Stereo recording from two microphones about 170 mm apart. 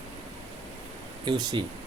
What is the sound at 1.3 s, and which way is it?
Speech, 25° right (ahead or behind).